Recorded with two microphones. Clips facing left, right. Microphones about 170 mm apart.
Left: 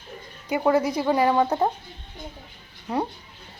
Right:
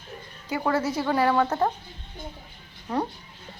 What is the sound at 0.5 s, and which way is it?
A woman's voice, 15° left (ahead or behind).